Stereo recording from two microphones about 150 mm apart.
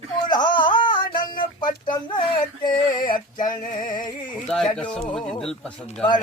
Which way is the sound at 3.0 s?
65° left (ahead or behind).